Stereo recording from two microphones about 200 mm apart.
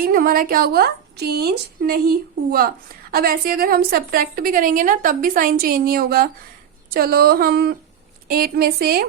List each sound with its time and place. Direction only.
0.0 s a woman's voice: 45° right (ahead or behind)